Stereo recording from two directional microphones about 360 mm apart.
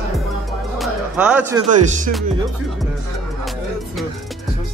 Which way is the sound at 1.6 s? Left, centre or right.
Right.